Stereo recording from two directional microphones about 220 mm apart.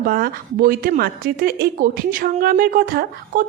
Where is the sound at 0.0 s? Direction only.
40° right (ahead or behind).